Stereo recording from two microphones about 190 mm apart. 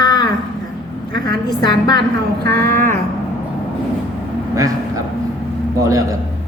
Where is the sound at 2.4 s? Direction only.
55° right (ahead or behind).